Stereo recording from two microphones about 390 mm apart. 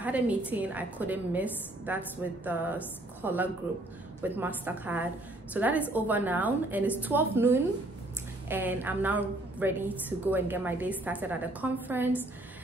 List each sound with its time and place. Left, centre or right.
0.0 s a woman's voice: centre